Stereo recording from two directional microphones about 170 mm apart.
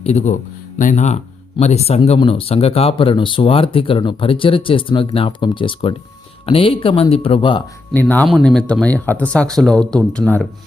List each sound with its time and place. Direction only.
0.0 s speech: 40° left (ahead or behind)
7.9 s speech: 10° left (ahead or behind)